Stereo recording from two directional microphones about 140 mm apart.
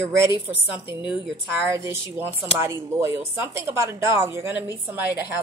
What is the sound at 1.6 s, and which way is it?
A woman's voice, 20° right (ahead or behind).